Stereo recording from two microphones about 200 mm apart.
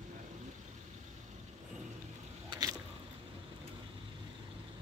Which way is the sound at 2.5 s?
20° right (ahead or behind).